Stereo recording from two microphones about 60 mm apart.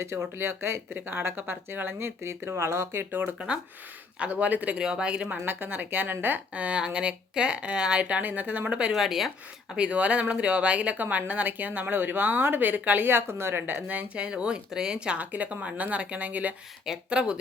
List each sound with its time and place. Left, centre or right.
0.0 s speech: right
4.2 s speech: right
4.8 s speech: centre
5.5 s speech: right
8.9 s speech: centre
9.7 s speech: centre
14.3 s speech: centre